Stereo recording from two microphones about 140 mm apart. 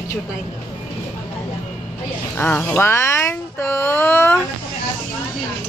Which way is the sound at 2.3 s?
15° left (ahead or behind).